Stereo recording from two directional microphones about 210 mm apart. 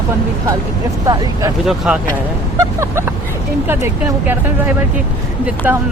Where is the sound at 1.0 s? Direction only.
15° right (ahead or behind).